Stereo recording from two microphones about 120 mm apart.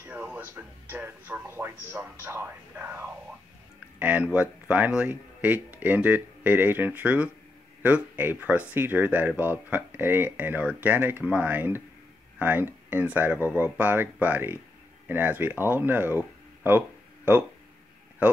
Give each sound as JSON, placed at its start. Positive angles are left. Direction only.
{"t": 0.0, "sound": "speech", "side_deg": -10}